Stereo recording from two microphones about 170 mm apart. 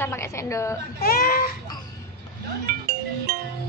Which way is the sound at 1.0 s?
60° left (ahead or behind).